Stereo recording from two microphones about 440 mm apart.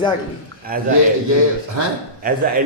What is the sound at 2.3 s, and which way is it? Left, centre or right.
Speech, centre.